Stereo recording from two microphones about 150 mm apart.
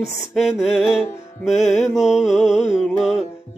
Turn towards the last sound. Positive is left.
turn(degrees=0)  # may be behind; listen again after turning